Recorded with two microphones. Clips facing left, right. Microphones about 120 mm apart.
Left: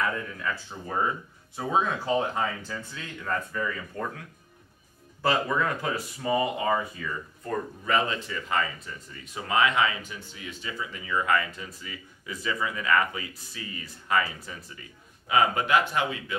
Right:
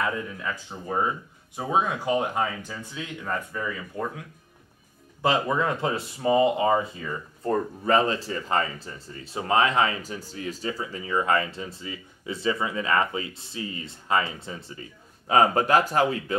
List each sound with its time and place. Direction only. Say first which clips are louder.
0.0 s speech: right 1 dB; 20° right (ahead or behind)
5.2 s speech: right 2 dB; 20° right (ahead or behind); by 16.3 s 40° right (ahead or behind)